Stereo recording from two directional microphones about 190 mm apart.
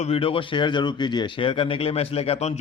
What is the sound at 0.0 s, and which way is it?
Speech, 30° left (ahead or behind).